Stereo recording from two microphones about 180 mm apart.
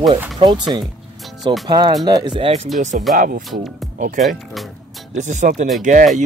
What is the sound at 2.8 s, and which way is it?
Speech, 45° right (ahead or behind).